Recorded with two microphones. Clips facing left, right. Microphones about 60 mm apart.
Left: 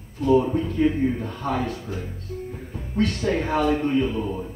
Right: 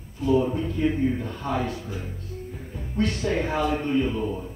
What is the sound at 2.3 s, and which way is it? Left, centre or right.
Music, left.